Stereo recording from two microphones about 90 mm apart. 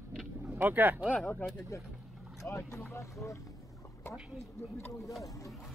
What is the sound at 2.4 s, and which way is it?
Speech, 30° left (ahead or behind).